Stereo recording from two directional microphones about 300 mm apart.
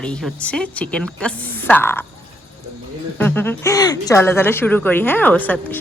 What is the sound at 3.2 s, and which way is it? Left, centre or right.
A woman's voice, centre.